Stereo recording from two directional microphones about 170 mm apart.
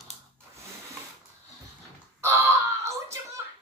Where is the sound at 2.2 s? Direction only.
15° right (ahead or behind).